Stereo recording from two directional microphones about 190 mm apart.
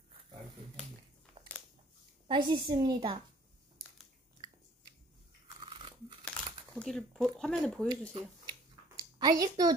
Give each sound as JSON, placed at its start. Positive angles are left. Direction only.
{"t": 2.2, "sound": "a woman's voice", "side_deg": -25}
{"t": 5.6, "sound": "toothbrush", "side_deg": -25}
{"t": 6.2, "sound": "crumpling", "side_deg": 5}
{"t": 7.3, "sound": "speech", "side_deg": 0}
{"t": 9.2, "sound": "a woman's voice", "side_deg": -20}